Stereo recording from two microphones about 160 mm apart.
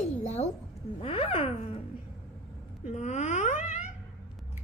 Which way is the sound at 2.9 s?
45° left (ahead or behind).